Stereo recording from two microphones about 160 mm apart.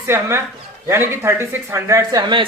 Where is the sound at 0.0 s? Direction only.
15° right (ahead or behind).